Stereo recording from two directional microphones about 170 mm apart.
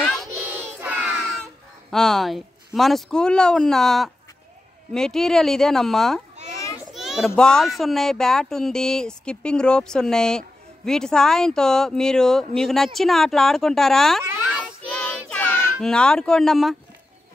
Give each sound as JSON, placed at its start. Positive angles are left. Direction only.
{"t": 0.0, "sound": "child singing", "side_deg": 0}
{"t": 0.6, "sound": "a sound", "side_deg": -10}
{"t": 1.9, "sound": "a child's voice", "side_deg": 0}
{"t": 6.5, "sound": "children playing", "side_deg": 20}
{"t": 6.9, "sound": "a child's voice", "side_deg": 0}
{"t": 14.2, "sound": "a sound", "side_deg": -10}
{"t": 14.9, "sound": "child singing", "side_deg": 10}